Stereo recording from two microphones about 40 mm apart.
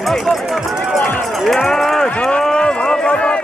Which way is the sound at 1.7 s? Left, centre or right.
Centre.